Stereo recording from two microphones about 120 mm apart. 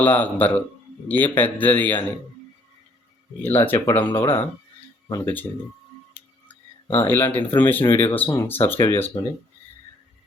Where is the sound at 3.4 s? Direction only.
15° left (ahead or behind).